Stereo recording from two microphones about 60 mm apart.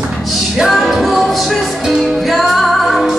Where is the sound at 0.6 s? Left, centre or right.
Centre.